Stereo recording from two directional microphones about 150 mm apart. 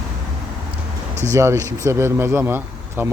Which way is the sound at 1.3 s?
20° right (ahead or behind).